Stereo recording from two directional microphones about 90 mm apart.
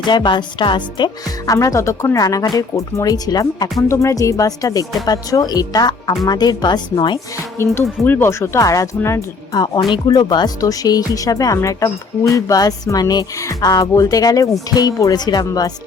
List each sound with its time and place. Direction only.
0.1 s speech: 55° left (ahead or behind)
1.5 s speech: 40° left (ahead or behind)
2.1 s speech: 45° left (ahead or behind); by 7.2 s 60° left (ahead or behind)
7.6 s speech: 25° left (ahead or behind)
9.5 s speech: 50° left (ahead or behind)